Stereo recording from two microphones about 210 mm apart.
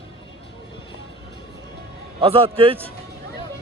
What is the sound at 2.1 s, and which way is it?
Speech, 25° right (ahead or behind).